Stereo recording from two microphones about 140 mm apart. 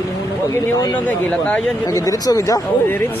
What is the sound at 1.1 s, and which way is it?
Speech, 10° left (ahead or behind).